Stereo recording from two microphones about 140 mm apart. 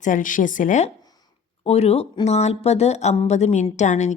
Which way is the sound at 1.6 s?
45° left (ahead or behind).